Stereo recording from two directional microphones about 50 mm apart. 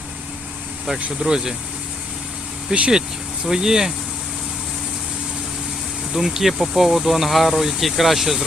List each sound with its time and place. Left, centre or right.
1.2 s speech: centre
2.7 s speech: centre
6.1 s speech: centre